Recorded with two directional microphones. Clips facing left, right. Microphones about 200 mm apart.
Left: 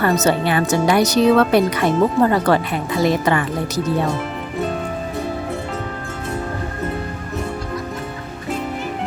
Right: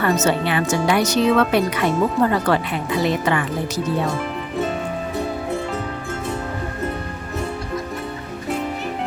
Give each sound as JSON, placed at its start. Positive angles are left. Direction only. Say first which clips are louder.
{"t": 0.0, "sound": "speech", "louder": "left 2 dB", "side_deg": 35}